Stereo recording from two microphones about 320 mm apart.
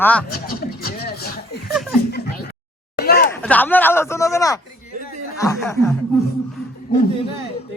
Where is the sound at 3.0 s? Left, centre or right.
Left.